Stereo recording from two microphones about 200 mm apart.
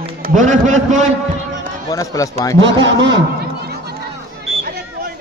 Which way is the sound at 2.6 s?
65° right (ahead or behind).